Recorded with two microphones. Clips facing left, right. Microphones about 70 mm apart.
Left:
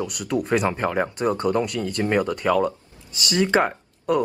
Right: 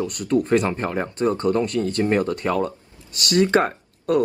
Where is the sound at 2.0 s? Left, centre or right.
Left.